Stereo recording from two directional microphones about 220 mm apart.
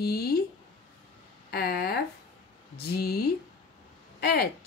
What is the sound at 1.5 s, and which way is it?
Speech, 45° left (ahead or behind).